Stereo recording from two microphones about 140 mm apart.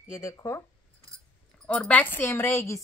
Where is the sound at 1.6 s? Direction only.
10° left (ahead or behind).